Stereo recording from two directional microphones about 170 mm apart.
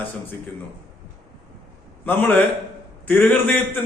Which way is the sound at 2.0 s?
10° left (ahead or behind).